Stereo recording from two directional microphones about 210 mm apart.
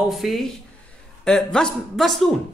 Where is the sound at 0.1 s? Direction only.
Centre (ahead or behind).